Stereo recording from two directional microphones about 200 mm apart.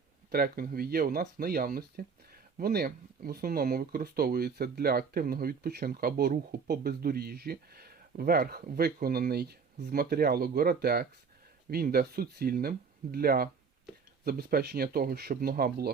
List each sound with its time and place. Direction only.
0.3 s speech: 50° right (ahead or behind)